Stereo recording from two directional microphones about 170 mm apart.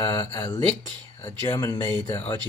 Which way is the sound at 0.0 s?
20° left (ahead or behind).